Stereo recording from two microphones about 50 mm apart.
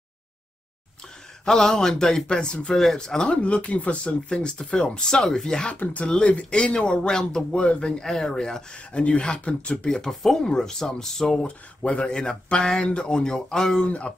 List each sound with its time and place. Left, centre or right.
1.4 s speech: centre
9.9 s speech: centre
11.4 s speech: left
13.8 s speech: left